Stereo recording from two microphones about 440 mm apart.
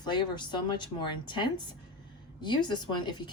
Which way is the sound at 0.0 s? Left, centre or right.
Centre.